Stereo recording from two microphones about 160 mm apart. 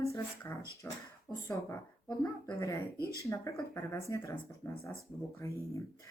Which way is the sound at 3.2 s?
20° left (ahead or behind).